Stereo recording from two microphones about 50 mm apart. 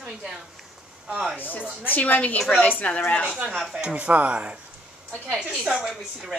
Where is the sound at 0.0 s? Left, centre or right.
Centre.